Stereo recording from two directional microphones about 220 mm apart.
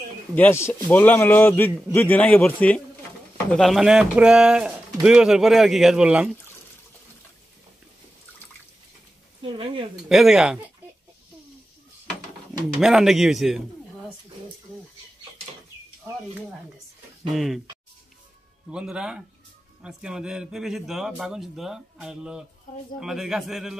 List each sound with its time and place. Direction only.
0.4 s a man's voice: 10° left (ahead or behind)
9.4 s speech: 25° right (ahead or behind)
10.0 s a man's voice: centre (ahead or behind)
12.8 s a man's voice: centre (ahead or behind)
18.7 s a man's voice: 5° right (ahead or behind)